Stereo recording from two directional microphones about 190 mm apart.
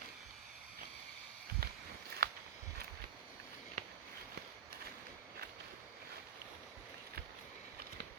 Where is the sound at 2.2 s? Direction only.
55° right (ahead or behind).